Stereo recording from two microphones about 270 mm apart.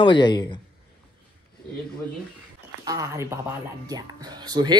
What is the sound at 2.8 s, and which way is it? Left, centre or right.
Speech, centre.